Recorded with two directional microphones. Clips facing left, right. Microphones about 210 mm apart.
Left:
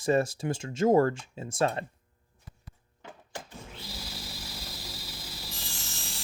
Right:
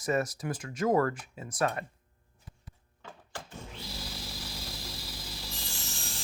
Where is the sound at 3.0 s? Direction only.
15° left (ahead or behind).